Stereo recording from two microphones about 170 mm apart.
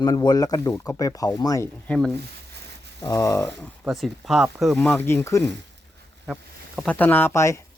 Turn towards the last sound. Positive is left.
turn(degrees=15)  # may be behind; listen again after turning